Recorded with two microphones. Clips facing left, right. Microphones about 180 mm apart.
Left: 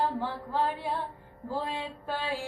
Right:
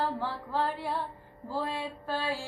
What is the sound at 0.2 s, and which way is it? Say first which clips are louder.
Child singing: left 1 dB; 15° left (ahead or behind).